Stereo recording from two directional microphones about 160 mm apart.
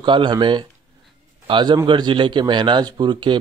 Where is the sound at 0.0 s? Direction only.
30° right (ahead or behind).